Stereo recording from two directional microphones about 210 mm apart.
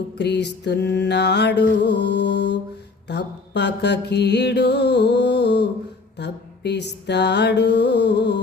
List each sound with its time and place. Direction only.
0.2 s mantra: 55° left (ahead or behind)